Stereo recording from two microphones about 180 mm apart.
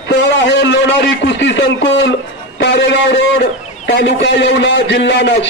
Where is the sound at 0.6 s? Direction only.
75° left (ahead or behind).